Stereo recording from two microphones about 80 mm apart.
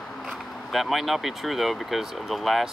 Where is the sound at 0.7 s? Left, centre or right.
Centre.